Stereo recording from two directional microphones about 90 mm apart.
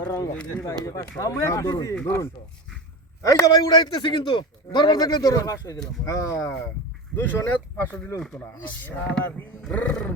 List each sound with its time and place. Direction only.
0.0 s a man's voice: 45° left (ahead or behind)
0.5 s speech: 30° left (ahead or behind)
3.2 s a man's voice: 40° left (ahead or behind); by 4.9 s 65° left (ahead or behind)
4.9 s a man's voice: 45° left (ahead or behind)
7.2 s speech: 20° left (ahead or behind)